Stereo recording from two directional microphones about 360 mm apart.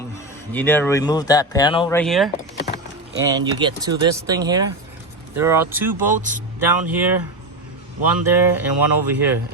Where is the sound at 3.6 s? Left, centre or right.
Centre.